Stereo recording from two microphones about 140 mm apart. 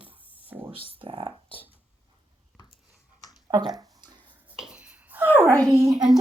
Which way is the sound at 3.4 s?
30° right (ahead or behind).